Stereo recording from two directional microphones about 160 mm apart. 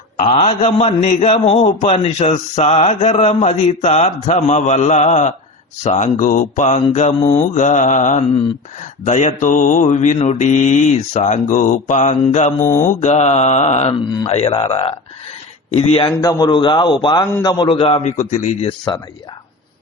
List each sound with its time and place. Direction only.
0.2 s a man's voice: 45° left (ahead or behind)
12.5 s mantra: 15° left (ahead or behind)
12.8 s a man's voice: 50° left (ahead or behind)